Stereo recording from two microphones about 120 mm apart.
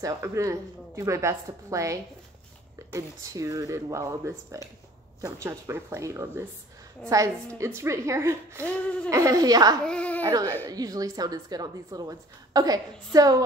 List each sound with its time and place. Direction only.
0.0 s a woman's voice: 25° right (ahead or behind)
9.8 s speech: 10° left (ahead or behind)
10.2 s a woman's voice: 30° right (ahead or behind)